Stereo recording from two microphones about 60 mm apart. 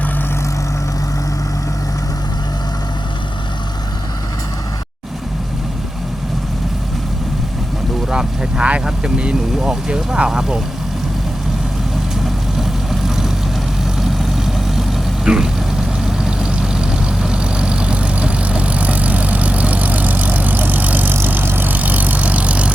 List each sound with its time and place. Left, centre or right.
8.1 s speech: centre
12.2 s vehicle: centre; by 22.7 s right